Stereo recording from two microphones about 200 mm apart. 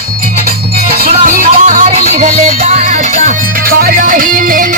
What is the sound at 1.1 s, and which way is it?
Music, 40° right (ahead or behind).